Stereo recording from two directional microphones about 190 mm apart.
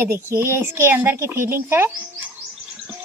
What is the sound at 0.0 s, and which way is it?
Speech, 10° right (ahead or behind).